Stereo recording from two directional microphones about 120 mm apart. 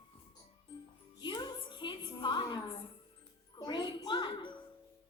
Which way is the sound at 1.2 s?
35° left (ahead or behind).